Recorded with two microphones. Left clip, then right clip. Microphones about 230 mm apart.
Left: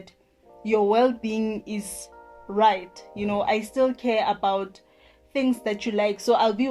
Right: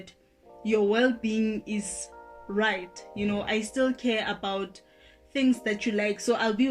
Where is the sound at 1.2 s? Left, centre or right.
Left.